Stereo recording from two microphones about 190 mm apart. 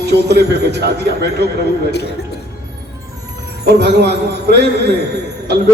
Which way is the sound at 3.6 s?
60° right (ahead or behind).